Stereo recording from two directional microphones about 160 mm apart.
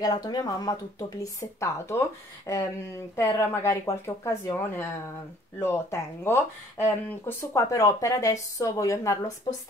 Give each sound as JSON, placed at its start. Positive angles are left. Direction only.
{"t": 0.0, "sound": "speech", "side_deg": 25}